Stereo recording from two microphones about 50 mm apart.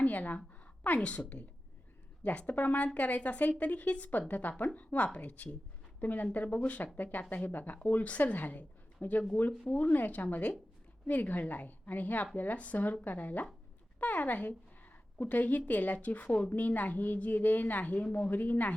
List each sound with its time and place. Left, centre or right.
0.0 s a woman's voice: left
18.3 s speech: left